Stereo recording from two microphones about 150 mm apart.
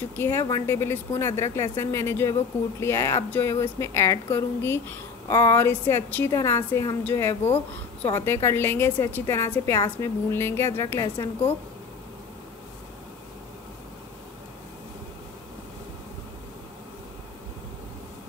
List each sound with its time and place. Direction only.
0.1 s a woman's voice: 15° left (ahead or behind)